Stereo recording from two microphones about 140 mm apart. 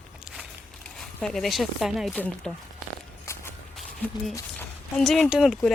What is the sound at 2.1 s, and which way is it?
Speech, 10° left (ahead or behind).